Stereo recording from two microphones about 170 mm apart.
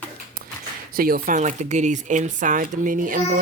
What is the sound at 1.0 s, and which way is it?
A woman's voice, 55° right (ahead or behind).